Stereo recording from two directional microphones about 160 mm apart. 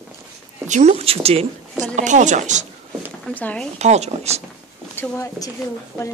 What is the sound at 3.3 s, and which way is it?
Speech, 10° left (ahead or behind).